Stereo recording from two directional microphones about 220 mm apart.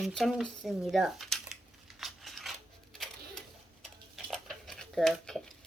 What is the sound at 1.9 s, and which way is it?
Scissors, centre (ahead or behind).